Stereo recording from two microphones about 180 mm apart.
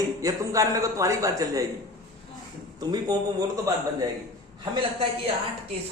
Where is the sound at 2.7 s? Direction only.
20° right (ahead or behind).